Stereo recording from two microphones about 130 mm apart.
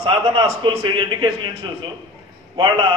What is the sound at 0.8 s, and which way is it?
Speech, 35° right (ahead or behind).